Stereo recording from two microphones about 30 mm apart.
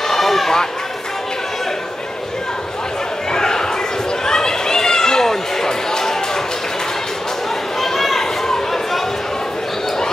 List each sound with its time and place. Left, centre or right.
0.1 s run: centre
3.3 s a sound: left
4.3 s chatter: left
7.8 s chatter: centre